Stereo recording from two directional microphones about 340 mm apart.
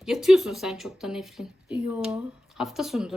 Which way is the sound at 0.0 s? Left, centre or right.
Centre.